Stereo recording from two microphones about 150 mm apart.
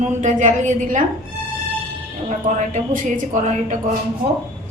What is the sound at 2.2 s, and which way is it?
A woman's voice, 50° right (ahead or behind).